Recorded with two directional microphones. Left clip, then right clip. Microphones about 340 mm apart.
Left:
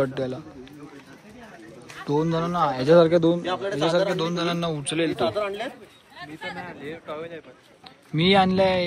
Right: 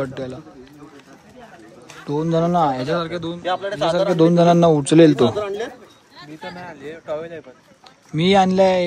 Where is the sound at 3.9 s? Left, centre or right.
Centre.